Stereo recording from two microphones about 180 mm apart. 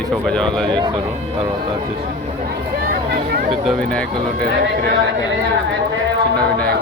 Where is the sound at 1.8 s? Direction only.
55° right (ahead or behind).